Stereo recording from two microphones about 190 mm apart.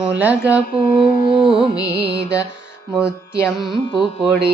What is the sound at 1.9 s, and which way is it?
Music, 55° right (ahead or behind).